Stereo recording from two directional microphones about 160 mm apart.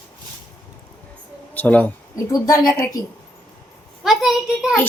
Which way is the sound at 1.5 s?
10° left (ahead or behind).